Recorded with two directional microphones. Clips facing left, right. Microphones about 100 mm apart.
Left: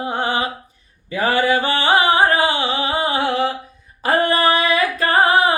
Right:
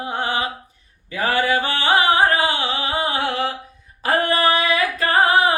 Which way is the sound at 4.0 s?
30° left (ahead or behind).